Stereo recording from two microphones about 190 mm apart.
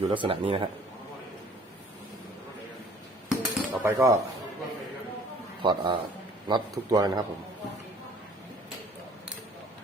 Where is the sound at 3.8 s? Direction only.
15° right (ahead or behind).